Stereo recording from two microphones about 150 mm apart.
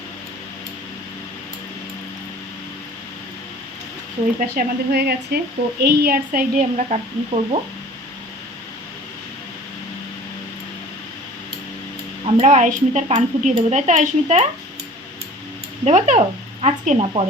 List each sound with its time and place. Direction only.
4.4 s speech: 90° right
6.7 s speech: 45° right (ahead or behind)
12.2 s speech: 50° right (ahead or behind)
15.8 s speech: 50° right (ahead or behind)